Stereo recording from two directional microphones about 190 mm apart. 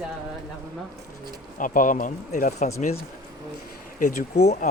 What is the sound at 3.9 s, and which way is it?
Speech, 45° left (ahead or behind).